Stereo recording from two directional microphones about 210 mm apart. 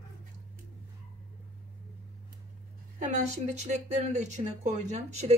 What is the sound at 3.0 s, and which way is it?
Speech, 35° right (ahead or behind).